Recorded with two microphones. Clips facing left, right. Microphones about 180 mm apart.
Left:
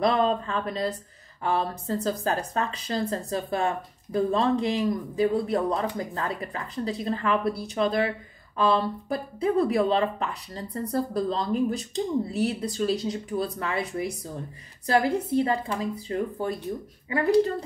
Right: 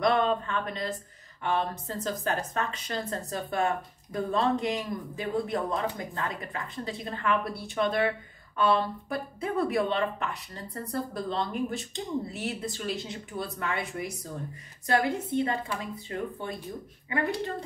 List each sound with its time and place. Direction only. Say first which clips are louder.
0.0 s speech: left 2 dB; 35° left (ahead or behind)